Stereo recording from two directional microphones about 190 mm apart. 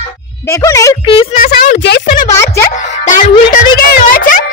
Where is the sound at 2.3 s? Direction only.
15° left (ahead or behind).